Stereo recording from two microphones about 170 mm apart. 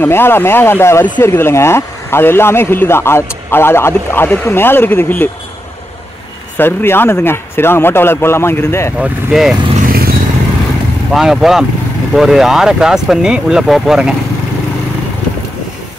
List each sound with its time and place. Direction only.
0.0 s a man's voice: 15° left (ahead or behind)
6.5 s a man's voice: 15° left (ahead or behind)
8.9 s speech: 5° right (ahead or behind)
9.8 s vehicle: 60° right (ahead or behind)
11.1 s speech: centre (ahead or behind)